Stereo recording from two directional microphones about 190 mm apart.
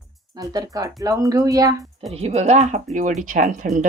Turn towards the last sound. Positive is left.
turn(degrees=-40)  # may be behind; listen again after turning